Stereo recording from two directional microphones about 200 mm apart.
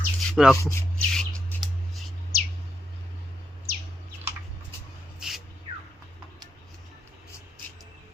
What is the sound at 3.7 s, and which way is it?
Bird, 50° right (ahead or behind).